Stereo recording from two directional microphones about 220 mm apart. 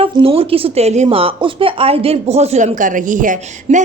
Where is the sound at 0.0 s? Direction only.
25° right (ahead or behind).